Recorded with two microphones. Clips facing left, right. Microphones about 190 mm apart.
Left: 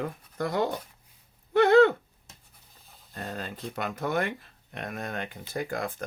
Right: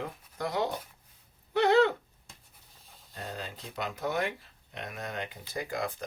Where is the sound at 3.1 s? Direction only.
50° left (ahead or behind).